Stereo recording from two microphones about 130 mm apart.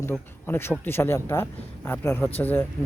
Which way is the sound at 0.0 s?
15° left (ahead or behind).